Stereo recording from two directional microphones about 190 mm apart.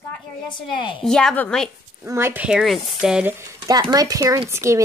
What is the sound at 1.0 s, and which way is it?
Speech, 5° left (ahead or behind).